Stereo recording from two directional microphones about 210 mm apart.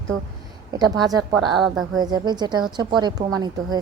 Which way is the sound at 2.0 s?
20° right (ahead or behind).